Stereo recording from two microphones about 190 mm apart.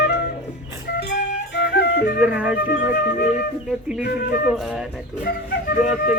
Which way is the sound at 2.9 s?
50° left (ahead or behind).